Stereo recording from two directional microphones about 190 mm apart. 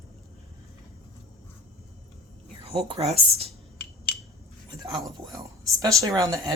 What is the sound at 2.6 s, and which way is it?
Speech, 30° right (ahead or behind).